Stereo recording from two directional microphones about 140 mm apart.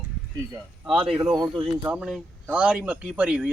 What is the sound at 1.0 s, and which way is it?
Speech, centre (ahead or behind).